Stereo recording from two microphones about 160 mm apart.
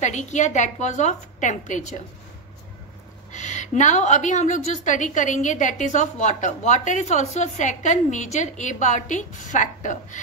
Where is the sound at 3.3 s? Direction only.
50° left (ahead or behind).